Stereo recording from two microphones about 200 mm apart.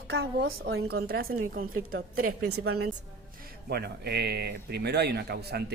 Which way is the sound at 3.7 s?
55° right (ahead or behind).